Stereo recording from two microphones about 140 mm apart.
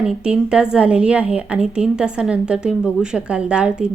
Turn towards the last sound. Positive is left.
turn(degrees=-5)  # may be behind; listen again after turning